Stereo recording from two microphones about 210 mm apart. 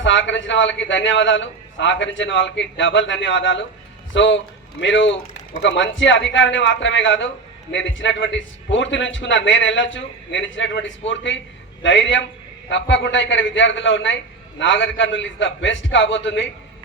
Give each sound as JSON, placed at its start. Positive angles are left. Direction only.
{"t": 0.0, "sound": "a man's voice", "side_deg": 60}